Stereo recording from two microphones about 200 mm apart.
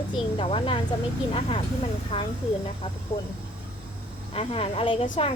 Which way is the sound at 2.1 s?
30° left (ahead or behind).